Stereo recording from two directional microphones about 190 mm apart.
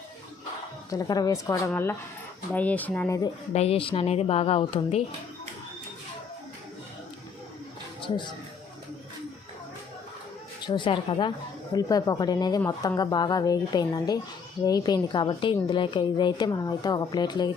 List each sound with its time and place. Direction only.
0.9 s a woman's voice: 20° left (ahead or behind)
3.5 s speech: 35° left (ahead or behind)
8.0 s speech: 25° left (ahead or behind)
10.7 s a woman's voice: 25° left (ahead or behind)